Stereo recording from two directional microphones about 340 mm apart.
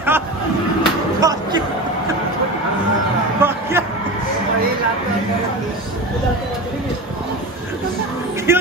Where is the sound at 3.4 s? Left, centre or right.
Centre.